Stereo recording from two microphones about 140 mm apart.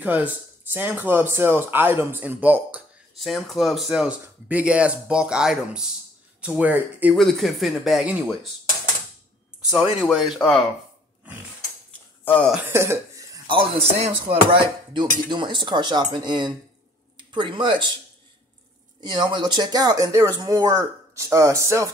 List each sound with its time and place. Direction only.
0.0 s speech: 10° right (ahead or behind)
3.2 s speech: centre (ahead or behind)
7.2 s speech: centre (ahead or behind)
9.7 s speech: centre (ahead or behind)
12.6 s cough: 20° right (ahead or behind)
13.5 s speech: 40° right (ahead or behind)
19.0 s speech: 35° right (ahead or behind)